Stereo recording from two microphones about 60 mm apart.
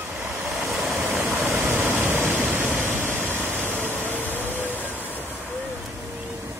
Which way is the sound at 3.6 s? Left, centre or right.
Left.